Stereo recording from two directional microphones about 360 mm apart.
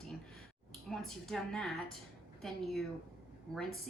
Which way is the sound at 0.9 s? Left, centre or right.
Centre.